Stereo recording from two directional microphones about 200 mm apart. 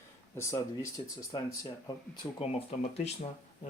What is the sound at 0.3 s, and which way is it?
Speech, 15° left (ahead or behind).